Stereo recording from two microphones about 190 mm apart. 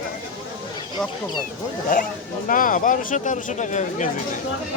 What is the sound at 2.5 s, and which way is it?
Speech, 45° left (ahead or behind).